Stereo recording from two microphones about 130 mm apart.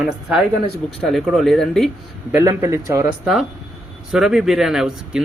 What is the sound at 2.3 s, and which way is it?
Speech, 20° right (ahead or behind).